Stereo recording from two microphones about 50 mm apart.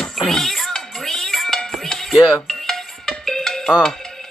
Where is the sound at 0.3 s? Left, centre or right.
Centre.